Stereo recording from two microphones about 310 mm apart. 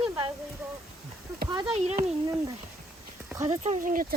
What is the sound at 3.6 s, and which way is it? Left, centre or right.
Speech, right.